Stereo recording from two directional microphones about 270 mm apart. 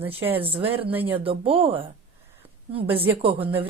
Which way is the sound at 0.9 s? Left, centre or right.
Centre.